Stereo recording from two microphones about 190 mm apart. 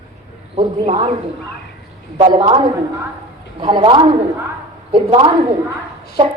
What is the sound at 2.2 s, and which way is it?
A woman's voice, 25° right (ahead or behind).